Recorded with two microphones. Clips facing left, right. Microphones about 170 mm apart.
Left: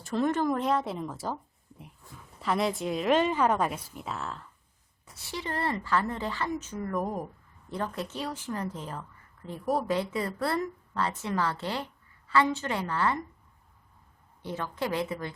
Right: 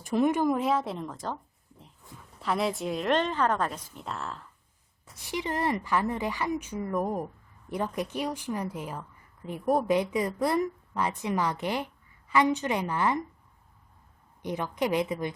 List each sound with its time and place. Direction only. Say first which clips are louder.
0.0 s a woman's voice: right 2 dB; 15° right (ahead or behind)
0.5 s speech: right 1 dB; centre (ahead or behind)
2.4 s speech: even; centre (ahead or behind)
5.1 s a woman's voice: right 3 dB; 15° right (ahead or behind)
7.7 s a woman's voice: right 3 dB; 15° right (ahead or behind)
14.4 s a woman's voice: right 3 dB; 15° right (ahead or behind)